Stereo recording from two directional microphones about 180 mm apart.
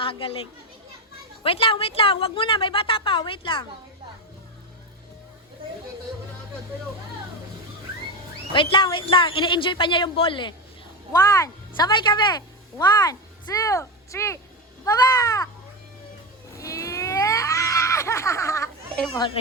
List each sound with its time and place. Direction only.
0.0 s a child's voice: 30° left (ahead or behind)
1.5 s a woman's voice: 30° left (ahead or behind)
8.5 s a woman's voice: 25° left (ahead or behind)
11.1 s a woman's voice: 20° left (ahead or behind)
16.6 s a sound: 15° left (ahead or behind)
19.2 s a woman's voice: 25° left (ahead or behind)